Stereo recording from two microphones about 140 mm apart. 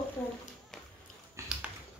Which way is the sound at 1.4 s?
20° right (ahead or behind).